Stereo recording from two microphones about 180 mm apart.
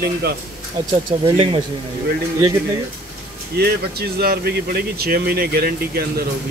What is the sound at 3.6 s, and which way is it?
Speech, 60° right (ahead or behind).